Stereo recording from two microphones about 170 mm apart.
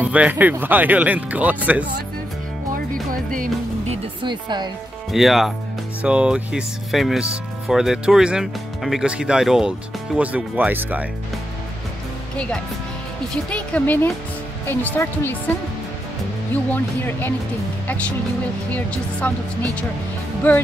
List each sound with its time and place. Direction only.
0.0 s speech: 10° right (ahead or behind)
3.3 s speech: 40° right (ahead or behind)
5.1 s speech: centre (ahead or behind)
13.3 s speech: 5° left (ahead or behind)
16.7 s speech: 10° left (ahead or behind)
19.2 s speech: 5° left (ahead or behind)